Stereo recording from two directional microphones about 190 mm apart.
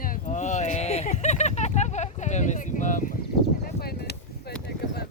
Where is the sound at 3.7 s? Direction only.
55° left (ahead or behind).